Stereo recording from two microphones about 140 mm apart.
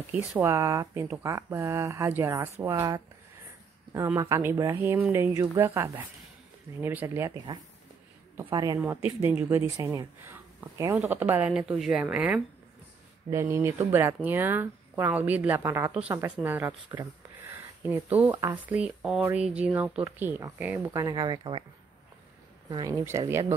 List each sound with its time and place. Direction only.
0.1 s speech: 10° right (ahead or behind)
8.5 s speech: 30° right (ahead or behind)
8.7 s speech: 15° right (ahead or behind)
13.3 s speech: 20° right (ahead or behind)
16.9 s a sound: 25° right (ahead or behind)
18.5 s speech: 10° right (ahead or behind); by 21.6 s 35° right (ahead or behind)
22.7 s speech: 30° right (ahead or behind)